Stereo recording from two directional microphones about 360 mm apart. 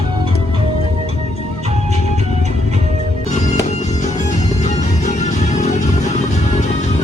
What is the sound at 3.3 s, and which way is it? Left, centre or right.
Music, centre.